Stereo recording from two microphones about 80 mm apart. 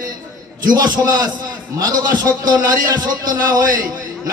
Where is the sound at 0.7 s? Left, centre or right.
Right.